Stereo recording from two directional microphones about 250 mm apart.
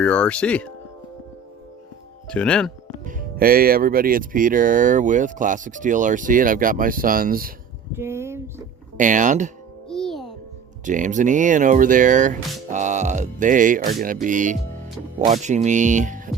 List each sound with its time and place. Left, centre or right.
0.0 s speech: centre
2.2 s speech: centre
3.0 s speech: right
7.9 s speech: centre
9.0 s speech: right
9.9 s music: centre
10.8 s speech: right
12.7 s music: right
14.0 s speech: right
15.4 s music: right